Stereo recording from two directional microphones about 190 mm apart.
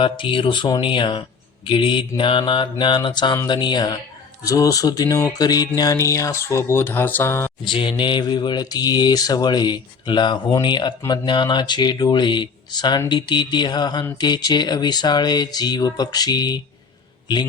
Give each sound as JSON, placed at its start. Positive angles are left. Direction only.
{"t": 0.0, "sound": "mantra", "side_deg": 25}
{"t": 4.4, "sound": "speech", "side_deg": 20}
{"t": 7.6, "sound": "mantra", "side_deg": 25}